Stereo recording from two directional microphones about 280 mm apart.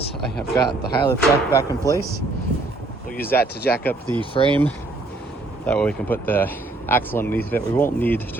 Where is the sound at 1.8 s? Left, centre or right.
Centre.